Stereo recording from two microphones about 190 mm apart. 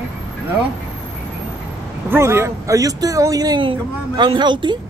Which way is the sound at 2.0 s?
15° right (ahead or behind).